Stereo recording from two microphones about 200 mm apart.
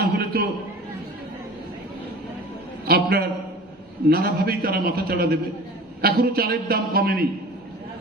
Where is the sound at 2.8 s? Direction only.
50° right (ahead or behind).